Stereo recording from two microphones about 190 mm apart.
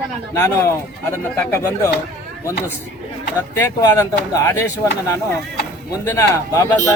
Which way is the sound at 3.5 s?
15° left (ahead or behind).